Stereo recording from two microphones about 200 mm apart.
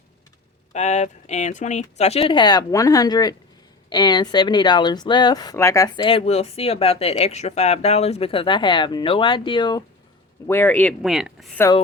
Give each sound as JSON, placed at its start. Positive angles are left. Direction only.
{"t": 0.7, "sound": "speech", "side_deg": 35}
{"t": 10.4, "sound": "speech", "side_deg": 10}